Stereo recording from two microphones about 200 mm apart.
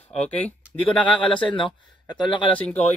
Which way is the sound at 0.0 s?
35° left (ahead or behind).